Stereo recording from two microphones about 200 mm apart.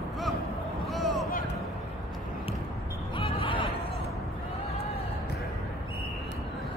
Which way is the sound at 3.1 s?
25° left (ahead or behind).